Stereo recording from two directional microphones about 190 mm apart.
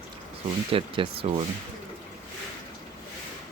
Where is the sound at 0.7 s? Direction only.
30° right (ahead or behind).